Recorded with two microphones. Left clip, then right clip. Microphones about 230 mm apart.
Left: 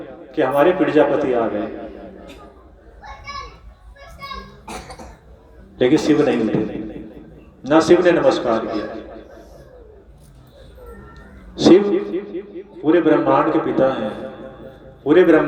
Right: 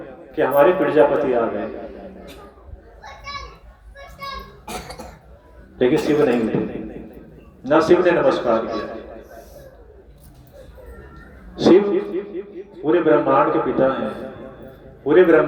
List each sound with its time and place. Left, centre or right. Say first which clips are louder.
0.0 s a man's voice: left 1 dB; left
4.6 s cough: right 1 dB; right
5.7 s a man's voice: left 2 dB; left
11.5 s a sound: left 2 dB; left
12.8 s a man's voice: left 1 dB; left